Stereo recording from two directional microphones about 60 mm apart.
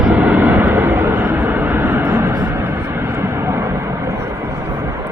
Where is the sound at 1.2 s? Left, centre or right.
Right.